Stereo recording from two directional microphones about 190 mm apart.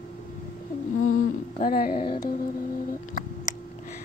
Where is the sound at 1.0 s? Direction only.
90° left.